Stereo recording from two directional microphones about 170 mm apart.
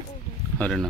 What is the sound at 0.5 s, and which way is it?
Speech, 5° left (ahead or behind).